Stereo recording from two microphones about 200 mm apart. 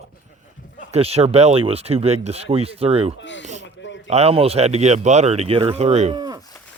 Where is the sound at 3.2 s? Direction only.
65° left (ahead or behind).